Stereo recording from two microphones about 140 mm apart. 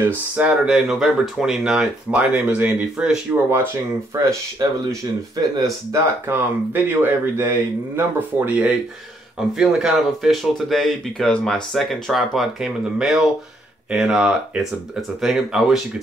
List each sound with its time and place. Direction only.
0.0 s speech: 10° right (ahead or behind)
3.4 s speech: 15° right (ahead or behind)
5.3 s speech: 25° right (ahead or behind); by 15.8 s 5° right (ahead or behind)